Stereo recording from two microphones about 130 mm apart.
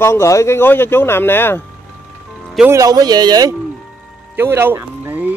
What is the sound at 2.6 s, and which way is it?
Speech, 25° right (ahead or behind).